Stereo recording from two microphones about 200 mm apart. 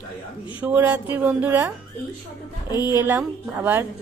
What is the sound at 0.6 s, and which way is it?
A woman's voice, 10° right (ahead or behind).